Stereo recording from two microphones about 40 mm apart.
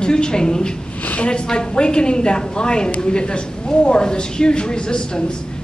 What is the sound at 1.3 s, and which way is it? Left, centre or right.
A woman's voice, left.